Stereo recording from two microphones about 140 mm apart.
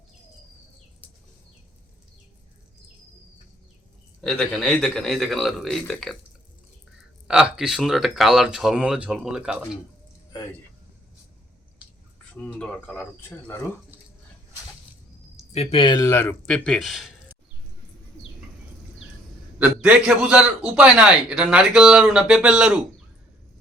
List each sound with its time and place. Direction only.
4.2 s speech: 5° left (ahead or behind)
7.3 s speech: 5° right (ahead or behind)
12.4 s speech: 5° left (ahead or behind)
15.5 s speech: 45° left (ahead or behind)
16.0 s speech: 20° left (ahead or behind)
16.5 s speech: 5° left (ahead or behind)
19.5 s a man's voice: 10° right (ahead or behind)